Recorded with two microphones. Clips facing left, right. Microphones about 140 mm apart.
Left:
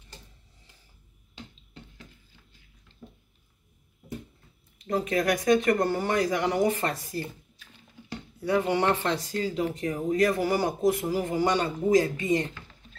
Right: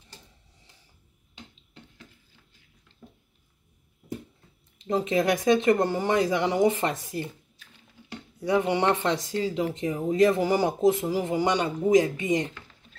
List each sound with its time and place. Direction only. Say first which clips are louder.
3.0 s a sound: left 2 dB; 5° left (ahead or behind)
4.8 s speech: right 2 dB; 25° right (ahead or behind)
8.4 s speech: right 1 dB; 20° right (ahead or behind)